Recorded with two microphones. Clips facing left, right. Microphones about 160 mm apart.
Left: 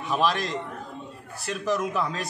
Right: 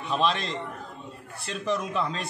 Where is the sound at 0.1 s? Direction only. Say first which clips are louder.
Left 1 dB; 5° left (ahead or behind).